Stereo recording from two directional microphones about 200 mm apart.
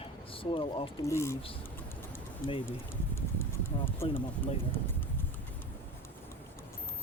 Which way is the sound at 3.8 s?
10° left (ahead or behind).